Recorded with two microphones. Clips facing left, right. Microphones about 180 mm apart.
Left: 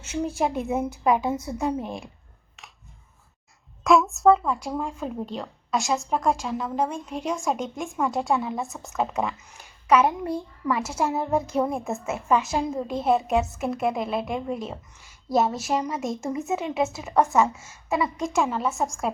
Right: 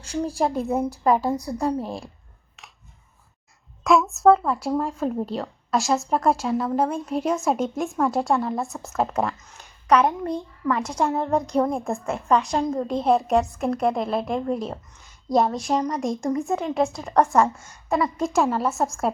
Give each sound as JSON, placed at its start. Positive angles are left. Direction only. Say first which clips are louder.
{"t": 0.0, "sound": "a woman's voice", "louder": "right 2 dB", "side_deg": 5}
{"t": 1.8, "sound": "a woman's voice", "louder": "right 2 dB", "side_deg": -30}
{"t": 3.8, "sound": "a woman's voice", "louder": "right 1 dB", "side_deg": 0}